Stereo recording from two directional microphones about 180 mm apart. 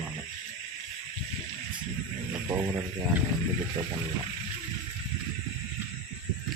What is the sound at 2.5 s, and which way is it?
Speech, 15° right (ahead or behind).